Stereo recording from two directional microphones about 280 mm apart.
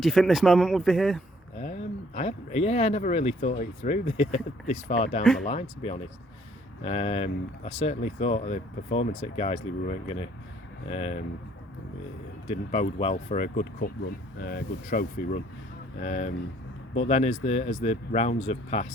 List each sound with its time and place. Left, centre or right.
0.0 s speech: centre
1.5 s speech: left
12.5 s speech: left